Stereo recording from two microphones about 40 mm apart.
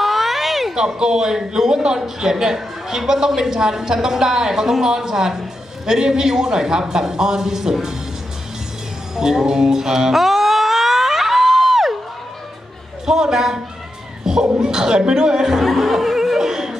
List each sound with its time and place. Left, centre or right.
0.0 s a sound: centre
0.7 s a man's voice: centre
9.1 s music: centre
13.0 s a man's voice: centre
14.2 s a sound: centre
14.6 s a man's voice: centre
15.6 s laughter: centre